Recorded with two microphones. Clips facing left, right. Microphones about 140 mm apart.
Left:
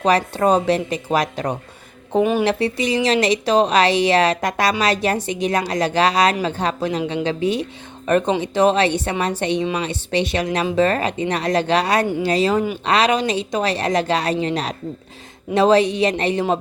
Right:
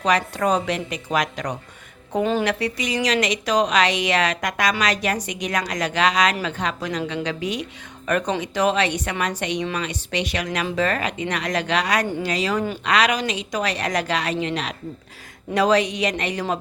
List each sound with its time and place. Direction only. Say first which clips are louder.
0.0 s a woman's voice: left 4 dB; 30° left (ahead or behind)